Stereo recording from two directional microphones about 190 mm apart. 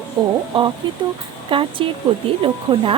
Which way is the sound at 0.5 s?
25° right (ahead or behind).